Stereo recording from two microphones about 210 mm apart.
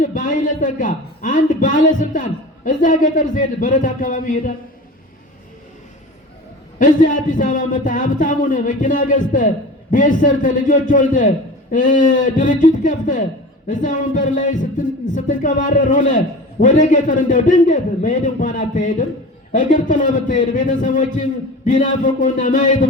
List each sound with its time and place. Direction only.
0.0 s a man's voice: 40° left (ahead or behind)
6.7 s a man's voice: 40° left (ahead or behind)